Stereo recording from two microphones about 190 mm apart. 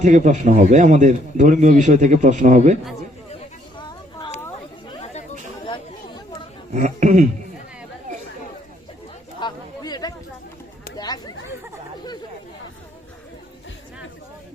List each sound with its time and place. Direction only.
0.0 s a man's voice: 40° right (ahead or behind)
5.6 s chatter: 25° left (ahead or behind)
6.7 s a man's voice: 45° right (ahead or behind)
9.4 s a sound: 20° left (ahead or behind)